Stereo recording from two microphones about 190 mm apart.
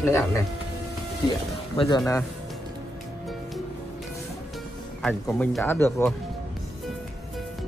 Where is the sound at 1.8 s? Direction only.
20° left (ahead or behind).